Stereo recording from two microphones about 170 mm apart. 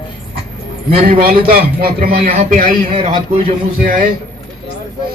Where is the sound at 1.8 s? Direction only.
60° right (ahead or behind).